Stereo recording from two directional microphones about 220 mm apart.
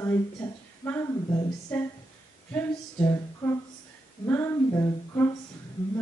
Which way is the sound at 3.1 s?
15° left (ahead or behind).